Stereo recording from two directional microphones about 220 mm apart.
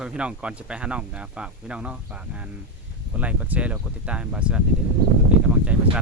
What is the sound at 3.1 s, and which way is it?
Speech, 5° right (ahead or behind).